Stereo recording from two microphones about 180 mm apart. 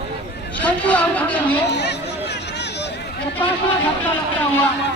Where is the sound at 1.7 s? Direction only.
70° left (ahead or behind).